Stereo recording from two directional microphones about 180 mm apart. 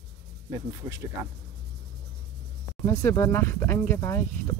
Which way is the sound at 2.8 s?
15° left (ahead or behind).